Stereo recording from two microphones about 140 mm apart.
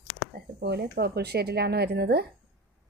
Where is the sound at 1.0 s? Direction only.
90° right.